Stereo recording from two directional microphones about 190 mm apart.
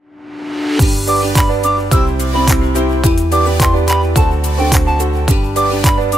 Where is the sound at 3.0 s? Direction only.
Centre (ahead or behind).